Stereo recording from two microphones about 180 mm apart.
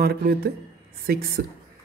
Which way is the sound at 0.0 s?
60° right (ahead or behind).